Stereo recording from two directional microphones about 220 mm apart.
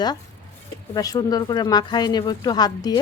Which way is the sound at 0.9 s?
15° left (ahead or behind).